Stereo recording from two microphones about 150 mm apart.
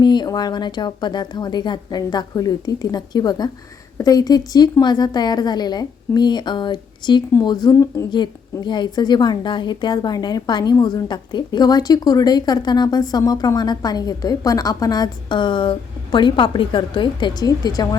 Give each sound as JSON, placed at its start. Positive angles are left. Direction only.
{"t": 0.0, "sound": "a woman's voice", "side_deg": 30}